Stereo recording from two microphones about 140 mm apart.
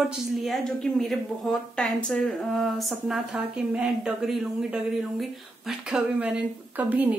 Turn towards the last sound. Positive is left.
turn(degrees=-10)  # may be behind; listen again after turning